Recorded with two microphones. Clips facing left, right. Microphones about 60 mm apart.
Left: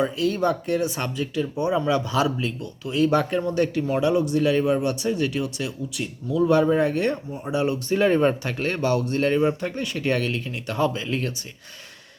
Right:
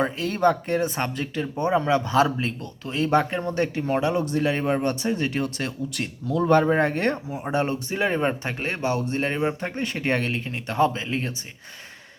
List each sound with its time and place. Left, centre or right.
0.0 s speech: right
7.9 s speech: centre